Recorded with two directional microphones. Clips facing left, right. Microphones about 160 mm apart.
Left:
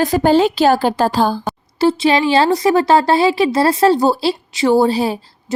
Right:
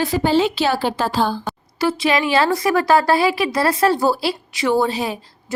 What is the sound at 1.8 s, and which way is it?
Speech, 30° left (ahead or behind).